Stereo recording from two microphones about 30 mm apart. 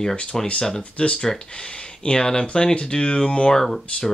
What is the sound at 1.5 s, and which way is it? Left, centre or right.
Speech, left.